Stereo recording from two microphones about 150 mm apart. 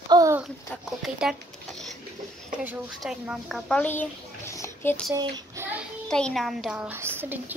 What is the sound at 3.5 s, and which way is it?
A child's voice, 5° left (ahead or behind).